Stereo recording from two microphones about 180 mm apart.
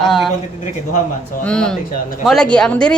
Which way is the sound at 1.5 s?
5° left (ahead or behind).